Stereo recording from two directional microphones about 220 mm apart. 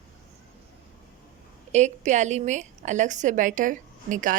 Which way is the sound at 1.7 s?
30° right (ahead or behind).